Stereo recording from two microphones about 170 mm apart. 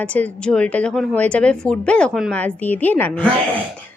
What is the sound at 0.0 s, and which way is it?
A woman's voice, 10° left (ahead or behind).